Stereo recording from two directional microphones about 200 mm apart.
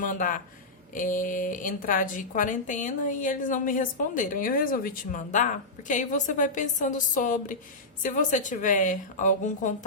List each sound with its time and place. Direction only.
0.0 s a woman's voice: 40° left (ahead or behind)